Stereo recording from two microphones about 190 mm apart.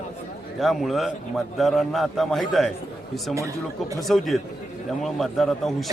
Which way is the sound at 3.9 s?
Centre (ahead or behind).